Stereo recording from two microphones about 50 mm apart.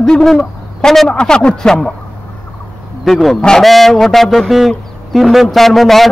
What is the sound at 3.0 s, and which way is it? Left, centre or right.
Speech, centre.